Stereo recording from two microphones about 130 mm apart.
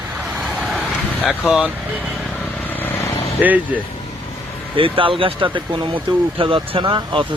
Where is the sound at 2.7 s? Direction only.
20° left (ahead or behind).